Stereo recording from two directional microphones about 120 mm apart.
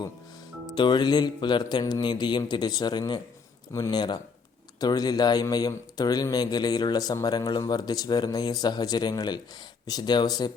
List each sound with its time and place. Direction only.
0.8 s a man's voice: 40° left (ahead or behind)